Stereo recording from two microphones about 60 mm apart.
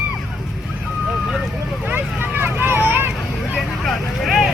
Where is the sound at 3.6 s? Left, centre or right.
Centre.